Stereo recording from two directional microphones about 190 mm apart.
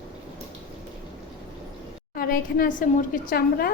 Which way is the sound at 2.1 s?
50° left (ahead or behind).